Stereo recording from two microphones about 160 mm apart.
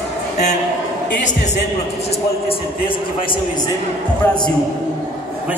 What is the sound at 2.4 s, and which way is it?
Speech, 30° left (ahead or behind).